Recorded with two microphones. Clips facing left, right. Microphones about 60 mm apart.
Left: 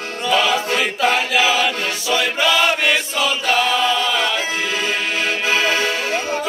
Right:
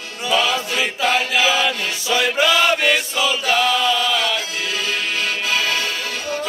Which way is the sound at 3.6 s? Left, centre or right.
Centre.